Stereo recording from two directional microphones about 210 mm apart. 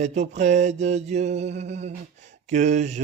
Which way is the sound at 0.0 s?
35° right (ahead or behind).